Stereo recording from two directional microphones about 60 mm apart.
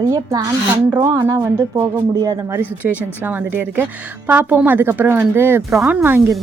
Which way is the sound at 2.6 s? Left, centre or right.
Right.